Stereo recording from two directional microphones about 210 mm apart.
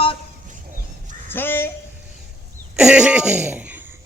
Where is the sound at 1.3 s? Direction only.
10° left (ahead or behind).